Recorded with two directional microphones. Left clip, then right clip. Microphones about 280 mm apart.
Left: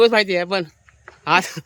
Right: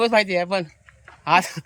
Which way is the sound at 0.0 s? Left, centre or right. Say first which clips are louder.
Left 3 dB; centre.